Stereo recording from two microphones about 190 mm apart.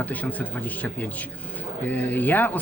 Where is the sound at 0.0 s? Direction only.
10° left (ahead or behind).